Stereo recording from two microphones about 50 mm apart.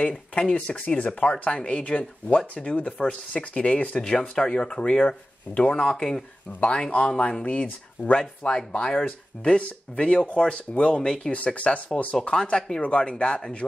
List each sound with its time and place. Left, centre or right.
0.4 s speech: centre
5.8 s speech: centre
11.3 s speech: left
12.3 s speech: centre